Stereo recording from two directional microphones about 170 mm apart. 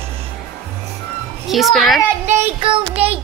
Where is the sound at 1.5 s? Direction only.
Centre (ahead or behind).